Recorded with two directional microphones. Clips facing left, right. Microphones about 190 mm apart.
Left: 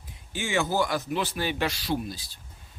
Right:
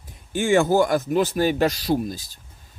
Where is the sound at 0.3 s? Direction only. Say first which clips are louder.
Right 9 dB; 50° right (ahead or behind).